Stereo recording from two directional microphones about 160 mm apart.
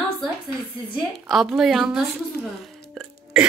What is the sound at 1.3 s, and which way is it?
Speech, centre (ahead or behind).